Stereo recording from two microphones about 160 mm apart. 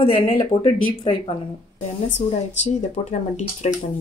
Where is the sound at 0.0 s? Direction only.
35° left (ahead or behind).